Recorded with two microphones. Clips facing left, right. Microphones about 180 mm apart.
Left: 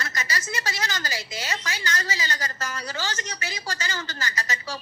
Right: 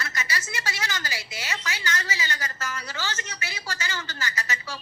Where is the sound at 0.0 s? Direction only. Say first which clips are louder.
Left 1 dB; 40° left (ahead or behind).